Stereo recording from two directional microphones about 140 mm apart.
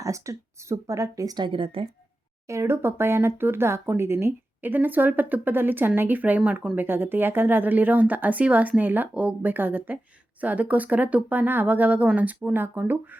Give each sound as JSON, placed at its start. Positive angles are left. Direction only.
{"t": 0.0, "sound": "speech", "side_deg": -20}
{"t": 2.5, "sound": "speech", "side_deg": -20}